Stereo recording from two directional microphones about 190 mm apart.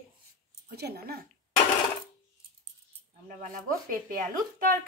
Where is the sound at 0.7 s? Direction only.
55° right (ahead or behind).